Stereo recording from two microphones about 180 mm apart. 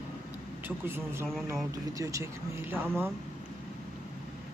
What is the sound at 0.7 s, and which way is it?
Speech, 10° right (ahead or behind).